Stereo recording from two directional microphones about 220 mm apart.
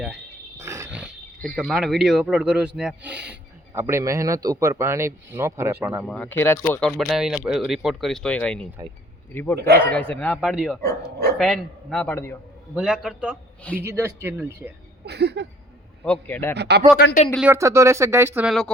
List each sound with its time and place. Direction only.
0.6 s wild animals: 10° right (ahead or behind)
1.5 s speech: centre (ahead or behind)
12.7 s speech: 5° right (ahead or behind)
15.0 s a sound: 50° right (ahead or behind)
16.0 s speech: 5° left (ahead or behind)
16.6 s a sound: 50° right (ahead or behind)
17.3 s speech: 10° right (ahead or behind)